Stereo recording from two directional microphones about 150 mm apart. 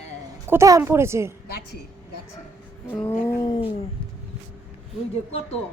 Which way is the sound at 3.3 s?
20° left (ahead or behind).